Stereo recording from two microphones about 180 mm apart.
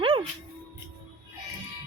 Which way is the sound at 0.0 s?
30° right (ahead or behind).